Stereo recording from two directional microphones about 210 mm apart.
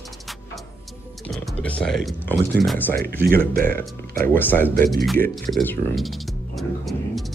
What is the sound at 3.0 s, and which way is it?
Speech, 45° right (ahead or behind).